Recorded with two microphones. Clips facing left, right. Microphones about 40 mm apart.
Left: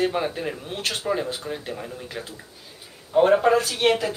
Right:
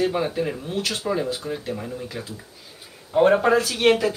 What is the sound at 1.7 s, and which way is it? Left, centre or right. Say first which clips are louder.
Speech: right 3 dB; centre.